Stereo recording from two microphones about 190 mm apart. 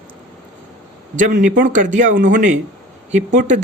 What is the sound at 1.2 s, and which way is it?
A man's voice, 45° right (ahead or behind).